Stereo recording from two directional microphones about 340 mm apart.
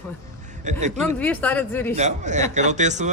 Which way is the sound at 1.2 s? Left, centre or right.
Centre.